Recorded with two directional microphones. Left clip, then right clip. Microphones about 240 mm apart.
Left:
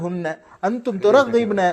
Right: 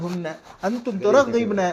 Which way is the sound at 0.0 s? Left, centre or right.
Left.